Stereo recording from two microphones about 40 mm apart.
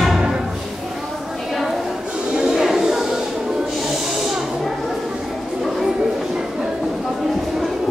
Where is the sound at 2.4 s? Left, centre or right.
Centre.